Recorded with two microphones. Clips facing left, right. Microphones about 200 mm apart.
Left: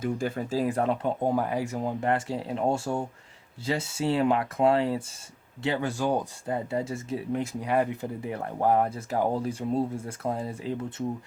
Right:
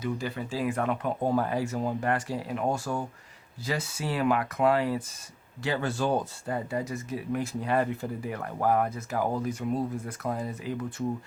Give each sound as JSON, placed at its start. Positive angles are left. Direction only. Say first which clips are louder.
{"t": 0.0, "sound": "speech", "louder": "left 3 dB", "side_deg": 50}
{"t": 1.2, "sound": "speech", "louder": "even", "side_deg": 15}
{"t": 5.6, "sound": "speech", "louder": "left 1 dB", "side_deg": 15}
{"t": 6.7, "sound": "speech", "louder": "left 2 dB", "side_deg": 30}